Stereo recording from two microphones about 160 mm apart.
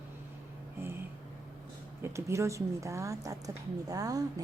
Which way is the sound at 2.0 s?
15° right (ahead or behind).